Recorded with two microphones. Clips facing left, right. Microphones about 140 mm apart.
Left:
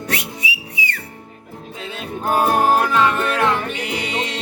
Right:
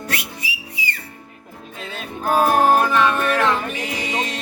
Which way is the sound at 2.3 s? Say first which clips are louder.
Right 1 dB; 20° left (ahead or behind).